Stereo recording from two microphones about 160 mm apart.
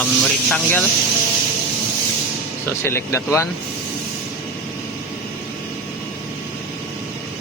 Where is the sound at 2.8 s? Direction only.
15° left (ahead or behind).